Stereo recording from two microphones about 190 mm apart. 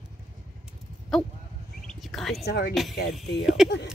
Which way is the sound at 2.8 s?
Centre (ahead or behind).